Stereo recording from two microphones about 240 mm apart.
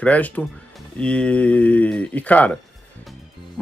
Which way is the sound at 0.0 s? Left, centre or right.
Centre.